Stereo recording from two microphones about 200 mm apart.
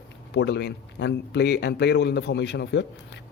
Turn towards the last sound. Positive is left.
turn(degrees=60)  # may be behind; listen again after turning